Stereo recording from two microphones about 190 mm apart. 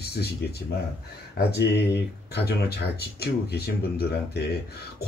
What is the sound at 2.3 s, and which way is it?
Speech, 60° left (ahead or behind).